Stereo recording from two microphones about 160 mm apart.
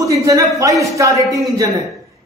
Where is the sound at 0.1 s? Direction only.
20° right (ahead or behind).